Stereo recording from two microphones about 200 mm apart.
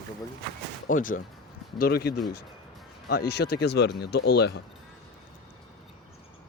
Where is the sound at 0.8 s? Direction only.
45° left (ahead or behind).